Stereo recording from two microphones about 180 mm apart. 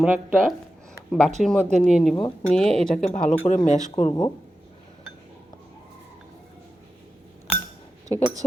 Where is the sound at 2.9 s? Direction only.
40° left (ahead or behind).